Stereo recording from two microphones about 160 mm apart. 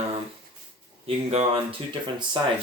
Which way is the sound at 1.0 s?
40° right (ahead or behind).